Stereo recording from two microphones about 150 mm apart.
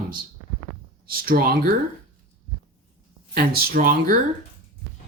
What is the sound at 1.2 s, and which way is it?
Speech, 75° right (ahead or behind).